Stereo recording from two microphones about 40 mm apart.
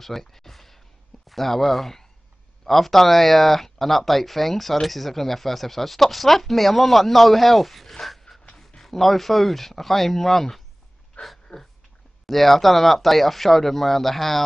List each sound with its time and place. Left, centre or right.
0.0 s speech: centre
7.9 s dog: centre
8.5 s a sound: centre
8.8 s speech: centre
11.2 s a sound: left
12.3 s speech: centre